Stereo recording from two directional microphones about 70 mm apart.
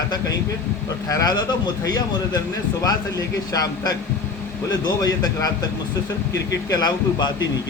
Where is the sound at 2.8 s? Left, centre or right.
Left.